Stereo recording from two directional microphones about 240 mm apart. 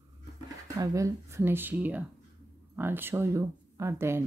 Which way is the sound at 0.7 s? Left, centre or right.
Centre.